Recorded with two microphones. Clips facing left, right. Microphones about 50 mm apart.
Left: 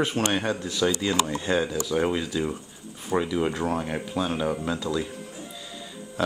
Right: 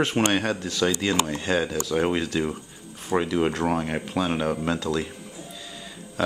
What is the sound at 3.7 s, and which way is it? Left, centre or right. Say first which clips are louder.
Speech: right 2 dB; right.